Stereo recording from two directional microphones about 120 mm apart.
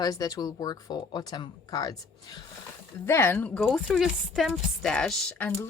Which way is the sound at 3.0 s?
20° left (ahead or behind).